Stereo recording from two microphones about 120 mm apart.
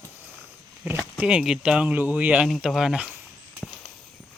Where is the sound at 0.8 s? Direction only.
15° right (ahead or behind).